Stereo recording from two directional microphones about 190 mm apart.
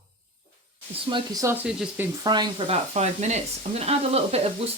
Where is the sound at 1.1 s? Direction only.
15° right (ahead or behind).